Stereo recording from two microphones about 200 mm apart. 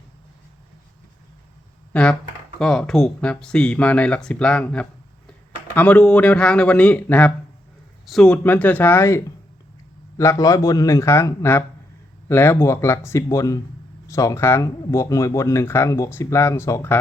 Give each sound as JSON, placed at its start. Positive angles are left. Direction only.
{"t": 1.9, "sound": "speech", "side_deg": 5}